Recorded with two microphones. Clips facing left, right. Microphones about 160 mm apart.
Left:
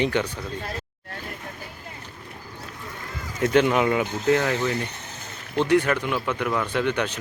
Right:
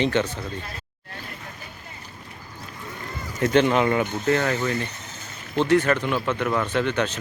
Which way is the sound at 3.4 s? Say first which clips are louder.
Even; 5° left (ahead or behind).